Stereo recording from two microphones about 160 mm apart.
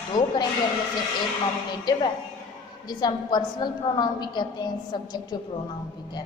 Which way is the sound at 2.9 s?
25° left (ahead or behind).